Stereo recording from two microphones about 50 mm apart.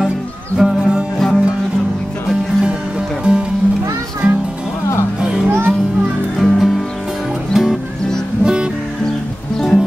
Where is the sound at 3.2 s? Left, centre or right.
Centre.